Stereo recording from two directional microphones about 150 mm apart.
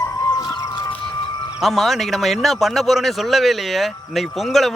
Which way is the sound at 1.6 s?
Centre (ahead or behind).